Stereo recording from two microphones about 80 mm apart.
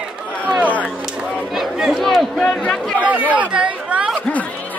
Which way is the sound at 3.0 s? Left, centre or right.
Centre.